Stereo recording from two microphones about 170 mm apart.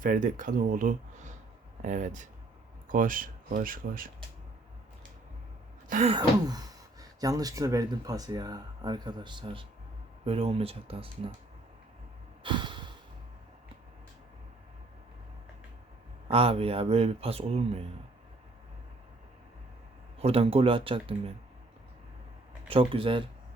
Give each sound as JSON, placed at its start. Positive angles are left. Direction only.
{"t": 0.0, "sound": "speech", "side_deg": -50}
{"t": 5.9, "sound": "speech", "side_deg": -40}
{"t": 6.1, "sound": "speech", "side_deg": -20}
{"t": 12.4, "sound": "a sound", "side_deg": -30}
{"t": 16.3, "sound": "speech", "side_deg": -35}
{"t": 20.1, "sound": "speech", "side_deg": -35}
{"t": 22.7, "sound": "speech", "side_deg": -30}